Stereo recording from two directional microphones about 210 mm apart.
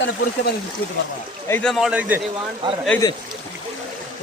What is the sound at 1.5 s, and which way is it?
Speech, 5° left (ahead or behind).